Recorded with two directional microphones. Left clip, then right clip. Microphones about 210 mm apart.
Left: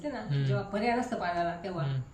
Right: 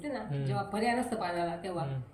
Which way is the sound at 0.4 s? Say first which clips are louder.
Left 1 dB; 15° left (ahead or behind).